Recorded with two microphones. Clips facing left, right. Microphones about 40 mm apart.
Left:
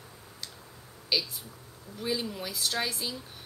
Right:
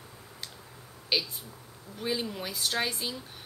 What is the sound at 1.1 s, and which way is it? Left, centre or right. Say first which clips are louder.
A woman's voice: even; right.